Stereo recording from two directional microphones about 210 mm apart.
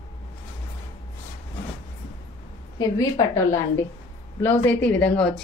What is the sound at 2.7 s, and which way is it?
Speech, 15° left (ahead or behind).